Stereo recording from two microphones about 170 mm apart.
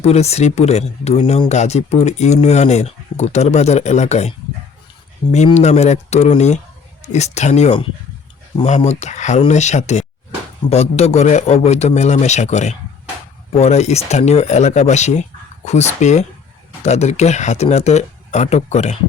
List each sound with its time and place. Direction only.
0.0 s speech: 40° left (ahead or behind)
5.5 s speech: 40° left (ahead or behind)